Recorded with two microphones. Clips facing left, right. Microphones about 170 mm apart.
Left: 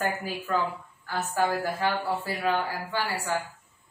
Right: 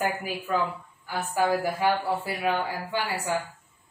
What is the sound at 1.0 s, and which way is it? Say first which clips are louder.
Speech: right 1 dB; 10° right (ahead or behind).